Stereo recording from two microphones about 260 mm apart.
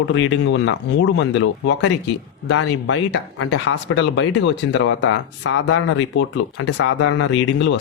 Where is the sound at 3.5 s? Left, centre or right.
Left.